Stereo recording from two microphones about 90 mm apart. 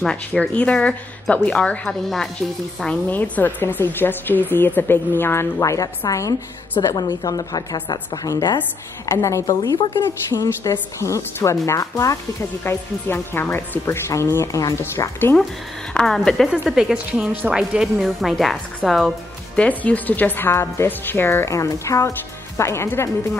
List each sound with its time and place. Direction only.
0.0 s speech: 10° left (ahead or behind)
3.1 s a woman's voice: 20° left (ahead or behind); by 15.0 s 35° left (ahead or behind)
15.9 s speech: 10° left (ahead or behind)
16.6 s speech: 5° right (ahead or behind)
19.5 s speech: 15° left (ahead or behind)